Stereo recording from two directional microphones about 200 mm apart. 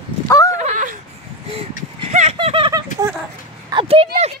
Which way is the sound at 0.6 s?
40° right (ahead or behind).